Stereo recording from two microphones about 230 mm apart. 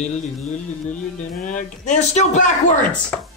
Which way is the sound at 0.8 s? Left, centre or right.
Left.